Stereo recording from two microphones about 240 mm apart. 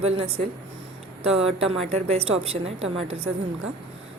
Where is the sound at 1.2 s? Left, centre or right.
Right.